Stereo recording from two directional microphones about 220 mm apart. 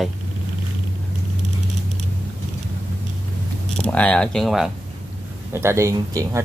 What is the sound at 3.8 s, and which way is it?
Speech, 5° left (ahead or behind).